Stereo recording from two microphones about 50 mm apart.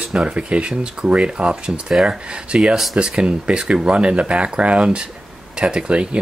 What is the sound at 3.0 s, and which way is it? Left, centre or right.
Speech, right.